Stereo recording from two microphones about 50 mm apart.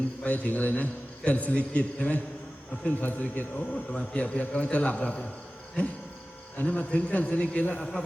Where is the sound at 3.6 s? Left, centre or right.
Left.